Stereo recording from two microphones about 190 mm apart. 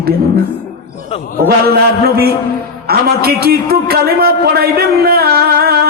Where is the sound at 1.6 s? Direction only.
55° right (ahead or behind).